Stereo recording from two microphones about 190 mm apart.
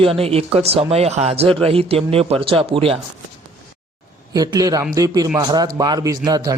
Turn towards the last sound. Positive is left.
turn(degrees=-20)  # may be behind; listen again after turning